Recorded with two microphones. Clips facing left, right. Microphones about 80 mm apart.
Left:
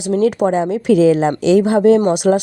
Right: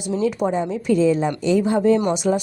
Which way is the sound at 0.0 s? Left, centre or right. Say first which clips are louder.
Left 6 dB; left.